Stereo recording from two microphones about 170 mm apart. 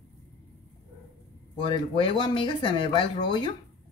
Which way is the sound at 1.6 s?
30° left (ahead or behind).